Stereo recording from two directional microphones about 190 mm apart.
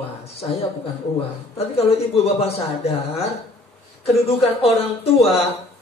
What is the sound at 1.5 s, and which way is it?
A man's voice, 30° left (ahead or behind).